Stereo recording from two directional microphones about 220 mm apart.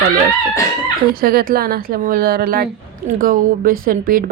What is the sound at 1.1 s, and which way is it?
A woman's voice, 45° right (ahead or behind).